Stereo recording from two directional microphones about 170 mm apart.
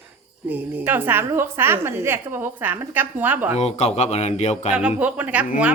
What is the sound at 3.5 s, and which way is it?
Speech, 40° left (ahead or behind).